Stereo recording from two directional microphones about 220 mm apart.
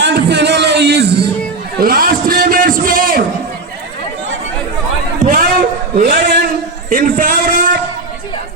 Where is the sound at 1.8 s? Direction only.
45° right (ahead or behind).